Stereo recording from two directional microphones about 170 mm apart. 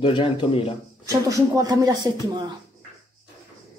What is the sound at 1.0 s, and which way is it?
Speech, 20° right (ahead or behind).